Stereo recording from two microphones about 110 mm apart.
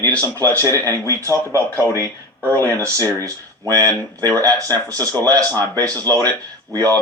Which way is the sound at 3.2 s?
30° right (ahead or behind).